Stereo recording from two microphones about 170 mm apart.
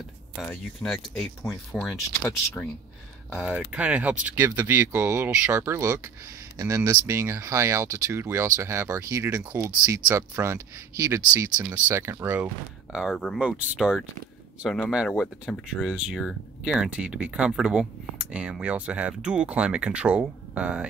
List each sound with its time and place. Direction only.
0.4 s speech: 5° left (ahead or behind)
3.3 s speech: 5° right (ahead or behind)
12.9 s speech: centre (ahead or behind)